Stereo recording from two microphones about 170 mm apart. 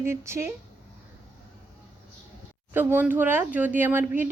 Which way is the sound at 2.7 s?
15° right (ahead or behind).